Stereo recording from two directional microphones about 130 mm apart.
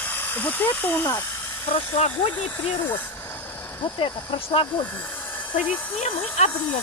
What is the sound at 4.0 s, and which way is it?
Speech, 45° left (ahead or behind).